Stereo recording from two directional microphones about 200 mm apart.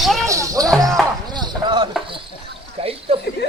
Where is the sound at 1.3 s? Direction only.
20° right (ahead or behind).